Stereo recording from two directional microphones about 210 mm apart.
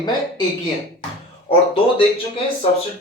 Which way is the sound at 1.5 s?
25° left (ahead or behind).